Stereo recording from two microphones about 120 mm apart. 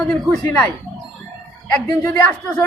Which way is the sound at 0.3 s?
15° left (ahead or behind).